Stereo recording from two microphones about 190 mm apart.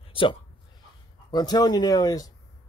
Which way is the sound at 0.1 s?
25° left (ahead or behind).